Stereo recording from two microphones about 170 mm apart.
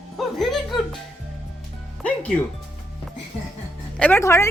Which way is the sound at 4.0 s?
15° left (ahead or behind).